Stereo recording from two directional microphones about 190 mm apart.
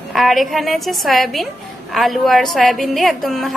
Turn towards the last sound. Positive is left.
turn(degrees=0)  # may be behind; listen again after turning